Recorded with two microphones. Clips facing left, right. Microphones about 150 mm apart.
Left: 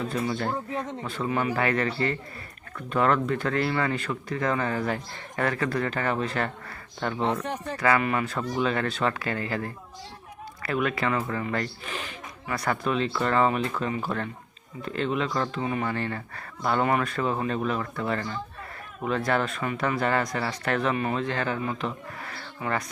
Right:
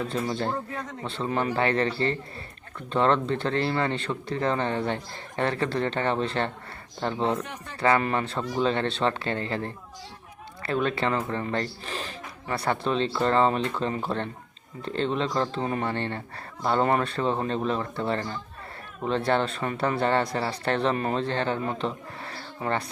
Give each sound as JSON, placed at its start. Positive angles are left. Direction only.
{"t": 0.1, "sound": "speech", "side_deg": -30}
{"t": 7.4, "sound": "speech", "side_deg": 35}
{"t": 7.8, "sound": "speech", "side_deg": -30}